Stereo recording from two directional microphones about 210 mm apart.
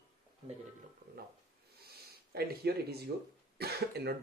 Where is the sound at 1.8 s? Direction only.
50° right (ahead or behind).